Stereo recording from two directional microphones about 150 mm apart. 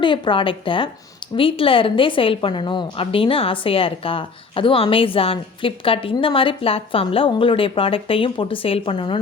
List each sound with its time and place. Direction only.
0.0 s a woman's voice: 35° left (ahead or behind)